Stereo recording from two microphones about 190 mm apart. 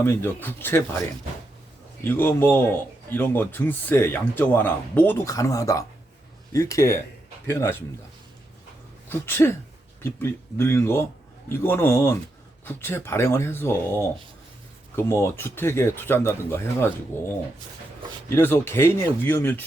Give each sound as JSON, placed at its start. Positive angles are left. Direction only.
{"t": 0.0, "sound": "speech", "side_deg": 10}
{"t": 2.0, "sound": "speech", "side_deg": 10}
{"t": 9.0, "sound": "speech", "side_deg": 10}